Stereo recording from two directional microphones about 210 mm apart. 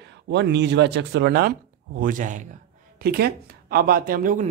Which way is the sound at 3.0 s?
50° right (ahead or behind).